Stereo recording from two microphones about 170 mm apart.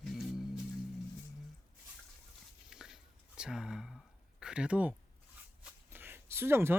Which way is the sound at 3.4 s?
5° right (ahead or behind).